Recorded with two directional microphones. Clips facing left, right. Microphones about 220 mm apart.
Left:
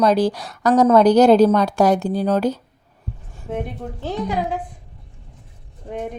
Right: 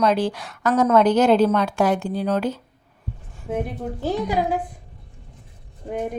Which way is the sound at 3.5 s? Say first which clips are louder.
Right 1 dB; 5° right (ahead or behind).